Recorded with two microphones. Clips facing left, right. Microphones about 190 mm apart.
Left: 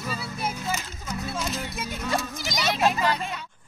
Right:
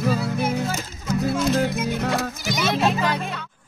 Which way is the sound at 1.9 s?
75° right (ahead or behind).